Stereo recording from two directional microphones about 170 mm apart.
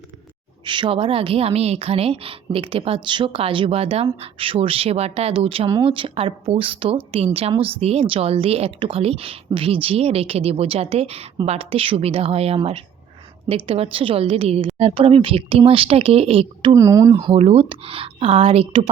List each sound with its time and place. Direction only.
0.6 s speech: 30° right (ahead or behind)
16.7 s speech: 20° right (ahead or behind); by 18.9 s 35° right (ahead or behind)